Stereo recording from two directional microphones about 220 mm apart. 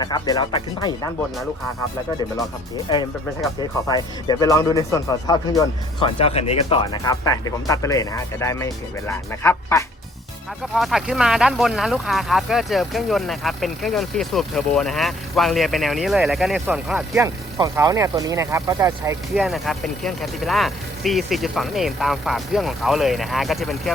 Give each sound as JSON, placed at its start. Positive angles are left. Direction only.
{"t": 0.0, "sound": "speech", "side_deg": 15}
{"t": 3.6, "sound": "speech", "side_deg": 20}
{"t": 6.9, "sound": "speech", "side_deg": 15}
{"t": 10.8, "sound": "speech", "side_deg": 0}
{"t": 19.3, "sound": "speech", "side_deg": 0}